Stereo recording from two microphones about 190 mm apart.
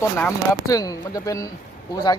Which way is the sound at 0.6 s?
20° left (ahead or behind).